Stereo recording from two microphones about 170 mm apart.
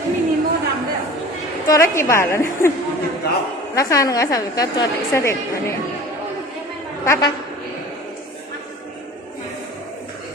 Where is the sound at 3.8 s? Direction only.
20° left (ahead or behind).